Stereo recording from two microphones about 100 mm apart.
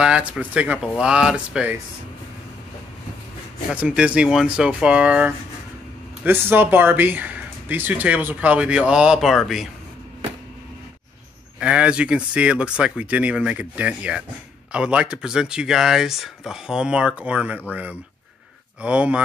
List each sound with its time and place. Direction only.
0.0 s speech: 10° right (ahead or behind)
3.7 s speech: 10° right (ahead or behind)
11.6 s speech: 10° right (ahead or behind)
18.8 s speech: 10° right (ahead or behind)